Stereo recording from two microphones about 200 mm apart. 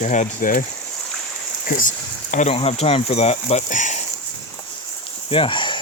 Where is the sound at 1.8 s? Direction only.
40° left (ahead or behind).